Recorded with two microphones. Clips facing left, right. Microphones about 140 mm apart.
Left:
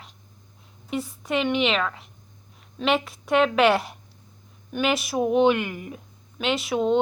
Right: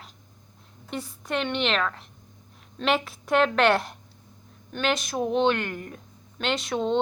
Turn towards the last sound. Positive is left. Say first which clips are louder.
# left 3 dB
turn(degrees=5)  # may be behind; listen again after turning